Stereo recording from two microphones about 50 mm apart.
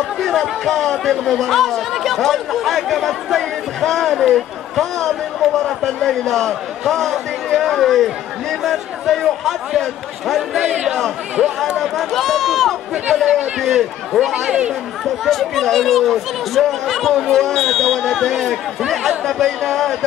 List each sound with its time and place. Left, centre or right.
0.2 s speech: centre
10.6 s speech: centre
11.8 s speech: centre
14.3 s speech: right
15.2 s speech: centre